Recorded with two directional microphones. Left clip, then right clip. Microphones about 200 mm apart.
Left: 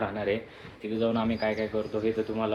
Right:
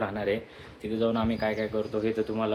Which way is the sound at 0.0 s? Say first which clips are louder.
Even; 20° right (ahead or behind).